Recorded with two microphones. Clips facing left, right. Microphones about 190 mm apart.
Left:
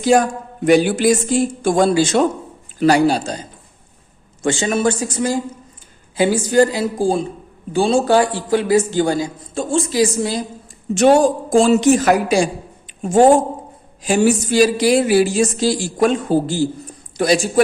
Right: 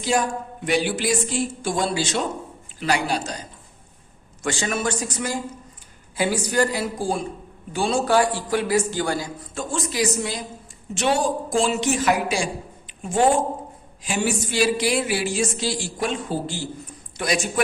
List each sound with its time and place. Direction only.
0.0 s speech: 45° left (ahead or behind)
4.4 s a man's voice: 25° left (ahead or behind)
10.9 s speech: 45° left (ahead or behind)